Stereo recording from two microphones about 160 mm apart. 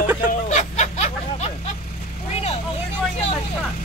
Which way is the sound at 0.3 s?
50° left (ahead or behind).